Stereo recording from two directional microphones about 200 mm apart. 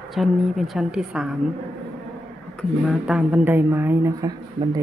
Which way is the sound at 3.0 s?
5° right (ahead or behind).